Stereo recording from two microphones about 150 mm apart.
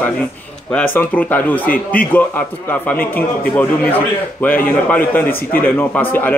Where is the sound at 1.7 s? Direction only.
75° left (ahead or behind).